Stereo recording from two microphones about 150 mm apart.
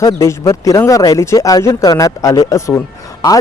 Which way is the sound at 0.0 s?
20° left (ahead or behind).